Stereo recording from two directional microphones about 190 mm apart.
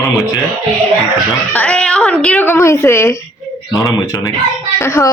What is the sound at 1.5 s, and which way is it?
A woman's voice, 5° left (ahead or behind).